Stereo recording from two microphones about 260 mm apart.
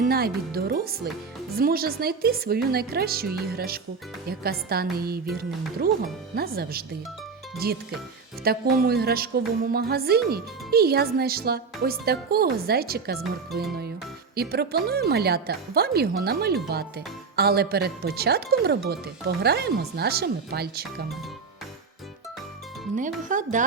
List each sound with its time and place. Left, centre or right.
0.0 s speech: right
23.0 s speech: right